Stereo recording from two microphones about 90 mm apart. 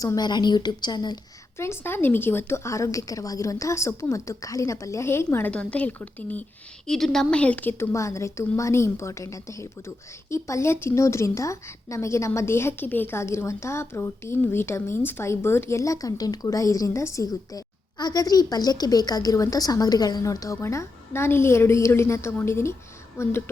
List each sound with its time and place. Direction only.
0.2 s a woman's voice: 55° left (ahead or behind)
1.5 s a woman's voice: 30° left (ahead or behind)
5.5 s a woman's voice: 15° left (ahead or behind)
6.8 s a woman's voice: 5° left (ahead or behind); by 7.9 s 20° left (ahead or behind)
7.9 s a woman's voice: 35° left (ahead or behind)
17.9 s a woman's voice: 45° left (ahead or behind); by 23.4 s 30° left (ahead or behind)